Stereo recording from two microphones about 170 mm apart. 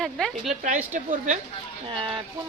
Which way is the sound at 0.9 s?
50° right (ahead or behind).